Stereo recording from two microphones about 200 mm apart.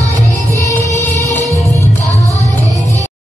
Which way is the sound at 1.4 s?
15° right (ahead or behind).